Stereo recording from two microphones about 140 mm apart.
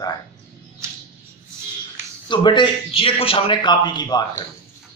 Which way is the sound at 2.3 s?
35° left (ahead or behind).